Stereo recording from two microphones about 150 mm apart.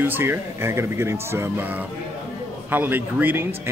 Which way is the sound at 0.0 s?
15° right (ahead or behind).